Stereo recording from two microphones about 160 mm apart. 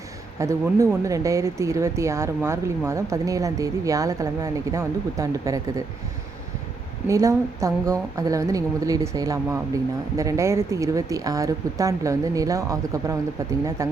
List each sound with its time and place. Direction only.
0.3 s speech: 20° right (ahead or behind)
7.1 s speech: 20° right (ahead or behind)